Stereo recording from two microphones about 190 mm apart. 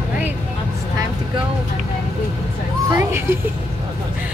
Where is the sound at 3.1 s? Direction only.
10° right (ahead or behind).